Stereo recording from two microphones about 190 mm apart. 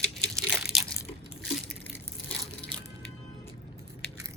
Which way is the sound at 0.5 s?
Centre (ahead or behind).